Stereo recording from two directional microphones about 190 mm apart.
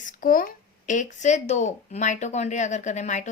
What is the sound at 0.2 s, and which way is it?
Speech, 45° left (ahead or behind).